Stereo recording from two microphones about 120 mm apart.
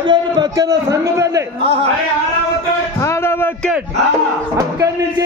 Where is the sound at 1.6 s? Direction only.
50° right (ahead or behind).